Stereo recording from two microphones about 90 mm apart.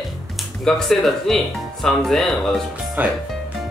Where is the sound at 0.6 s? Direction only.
5° left (ahead or behind).